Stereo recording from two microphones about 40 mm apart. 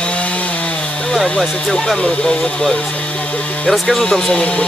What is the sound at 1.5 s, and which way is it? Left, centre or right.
Speech, centre.